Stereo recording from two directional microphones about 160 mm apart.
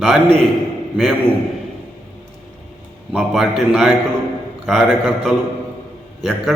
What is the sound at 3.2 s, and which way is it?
A man's voice, centre (ahead or behind).